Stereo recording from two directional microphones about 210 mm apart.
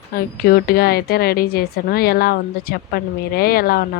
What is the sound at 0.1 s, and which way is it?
A woman's voice, 45° left (ahead or behind).